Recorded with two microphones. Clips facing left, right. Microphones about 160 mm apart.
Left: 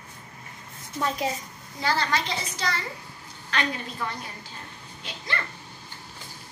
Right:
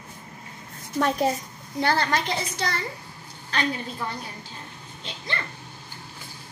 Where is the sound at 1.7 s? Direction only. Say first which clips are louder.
Right 3 dB; 55° right (ahead or behind).